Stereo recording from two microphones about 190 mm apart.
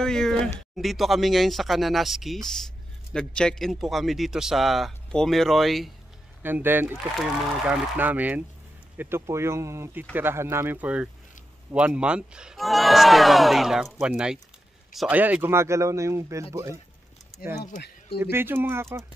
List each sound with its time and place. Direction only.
0.0 s speech: 5° left (ahead or behind)
6.4 s speech: 10° right (ahead or behind)
17.6 s speech: 60° left (ahead or behind)
18.3 s speech: 10° right (ahead or behind)